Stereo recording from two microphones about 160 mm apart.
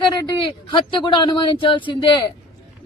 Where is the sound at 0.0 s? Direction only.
25° left (ahead or behind).